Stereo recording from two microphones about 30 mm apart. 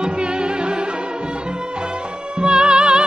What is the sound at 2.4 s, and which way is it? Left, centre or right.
Music, right.